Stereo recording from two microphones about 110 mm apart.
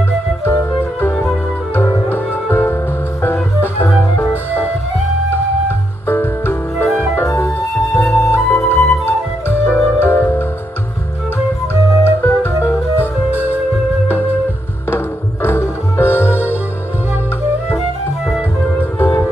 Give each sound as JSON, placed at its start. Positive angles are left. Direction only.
{"t": 0.5, "sound": "music", "side_deg": 20}
{"t": 1.1, "sound": "music", "side_deg": 0}
{"t": 1.8, "sound": "music", "side_deg": 20}
{"t": 6.0, "sound": "music", "side_deg": 20}
{"t": 8.1, "sound": "flute", "side_deg": 25}
{"t": 9.0, "sound": "music", "side_deg": 20}
{"t": 12.0, "sound": "music", "side_deg": 20}
{"t": 15.4, "sound": "music", "side_deg": 20}
{"t": 18.7, "sound": "music", "side_deg": 20}